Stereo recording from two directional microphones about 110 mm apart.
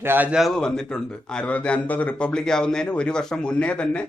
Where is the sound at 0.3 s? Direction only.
Centre (ahead or behind).